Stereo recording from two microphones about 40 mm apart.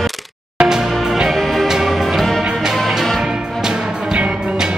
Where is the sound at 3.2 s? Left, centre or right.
Centre.